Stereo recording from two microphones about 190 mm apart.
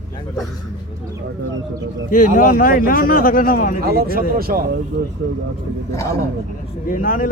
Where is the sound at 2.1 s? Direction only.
45° left (ahead or behind).